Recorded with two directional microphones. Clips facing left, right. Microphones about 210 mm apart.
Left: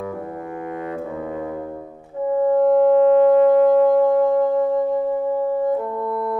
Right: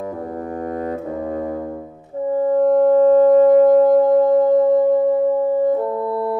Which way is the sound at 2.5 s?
40° right (ahead or behind).